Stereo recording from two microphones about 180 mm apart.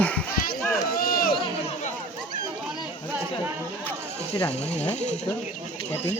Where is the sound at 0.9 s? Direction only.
55° left (ahead or behind).